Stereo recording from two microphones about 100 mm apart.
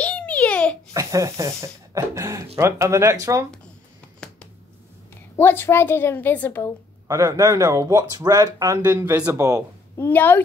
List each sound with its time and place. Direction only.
0.0 s babbling: 10° left (ahead or behind)
0.9 s speech: 30° right (ahead or behind)
4.2 s a sound: 10° left (ahead or behind)
5.4 s a woman's voice: 20° left (ahead or behind)
7.1 s speech: 35° right (ahead or behind)
8.8 s speech: 20° right (ahead or behind)
9.3 s speech: 35° right (ahead or behind)
9.9 s a woman's voice: 20° left (ahead or behind)